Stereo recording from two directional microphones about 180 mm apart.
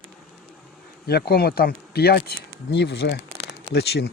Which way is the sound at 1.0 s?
60° left (ahead or behind).